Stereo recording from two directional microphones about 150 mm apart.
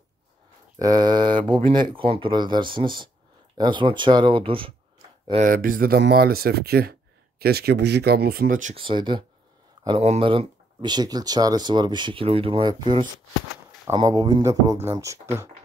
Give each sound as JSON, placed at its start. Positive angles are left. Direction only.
{"t": 0.7, "sound": "speech", "side_deg": -25}
{"t": 5.4, "sound": "speech", "side_deg": -70}
{"t": 8.7, "sound": "speech", "side_deg": -35}
{"t": 9.8, "sound": "speech", "side_deg": -45}